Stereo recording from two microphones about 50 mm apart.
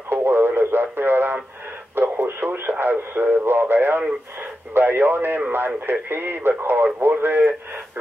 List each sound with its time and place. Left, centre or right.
0.1 s radio: right
2.8 s speech: right